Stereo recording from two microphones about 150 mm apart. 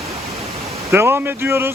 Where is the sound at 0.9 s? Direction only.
15° right (ahead or behind).